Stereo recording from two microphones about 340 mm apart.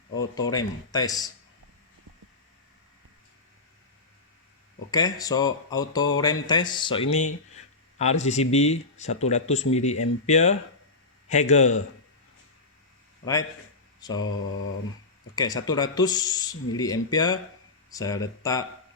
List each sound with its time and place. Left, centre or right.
0.2 s speech: centre
4.9 s speech: centre
14.0 s mantra: centre
15.4 s speech: centre